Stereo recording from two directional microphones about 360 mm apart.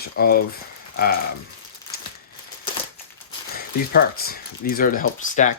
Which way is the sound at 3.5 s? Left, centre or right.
Left.